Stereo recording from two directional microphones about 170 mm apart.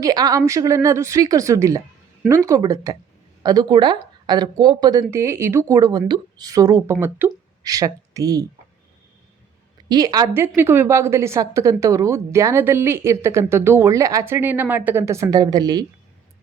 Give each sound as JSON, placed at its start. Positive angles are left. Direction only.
{"t": 0.0, "sound": "speech", "side_deg": -20}
{"t": 9.9, "sound": "a woman's voice", "side_deg": -25}